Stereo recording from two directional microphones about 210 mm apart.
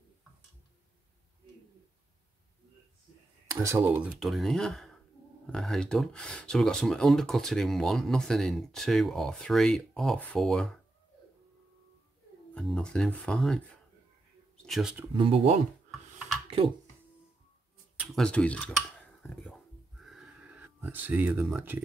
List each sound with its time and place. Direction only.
3.4 s speech: 15° right (ahead or behind); by 10.8 s centre (ahead or behind)
12.5 s speech: centre (ahead or behind)
15.1 s speech: 25° right (ahead or behind)
18.0 s dishes: centre (ahead or behind)
20.0 s a sound: centre (ahead or behind)